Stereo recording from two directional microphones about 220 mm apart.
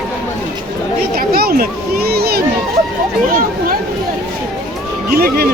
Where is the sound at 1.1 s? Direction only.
45° right (ahead or behind).